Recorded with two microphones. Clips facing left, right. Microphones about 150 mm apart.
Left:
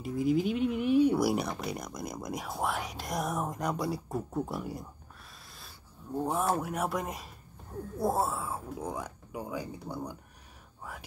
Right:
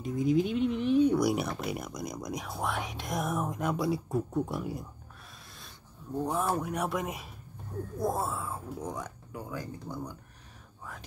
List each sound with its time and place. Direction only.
0.0 s speech: 5° left (ahead or behind)
5.5 s a sound: centre (ahead or behind)
6.2 s speech: 5° left (ahead or behind)
8.0 s speech: 30° left (ahead or behind)
8.3 s speech: 5° left (ahead or behind)